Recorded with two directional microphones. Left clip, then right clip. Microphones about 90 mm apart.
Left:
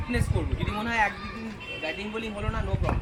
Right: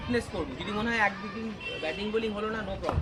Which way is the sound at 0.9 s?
20° right (ahead or behind).